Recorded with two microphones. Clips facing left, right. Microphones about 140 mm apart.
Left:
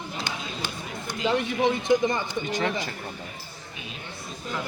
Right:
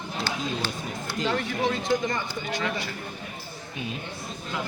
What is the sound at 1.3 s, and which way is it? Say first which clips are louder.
Speech: left 4 dB; 20° left (ahead or behind).